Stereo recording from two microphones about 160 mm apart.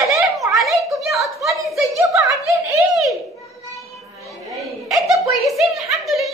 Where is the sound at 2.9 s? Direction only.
Centre (ahead or behind).